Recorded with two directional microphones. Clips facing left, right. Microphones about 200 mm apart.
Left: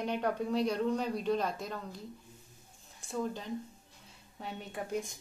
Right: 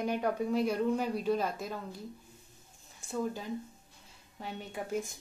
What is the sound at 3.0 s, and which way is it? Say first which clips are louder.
A woman's voice: right 1 dB; 5° right (ahead or behind).